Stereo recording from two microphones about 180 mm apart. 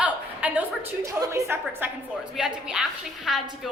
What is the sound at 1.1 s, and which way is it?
A woman's voice, 20° right (ahead or behind).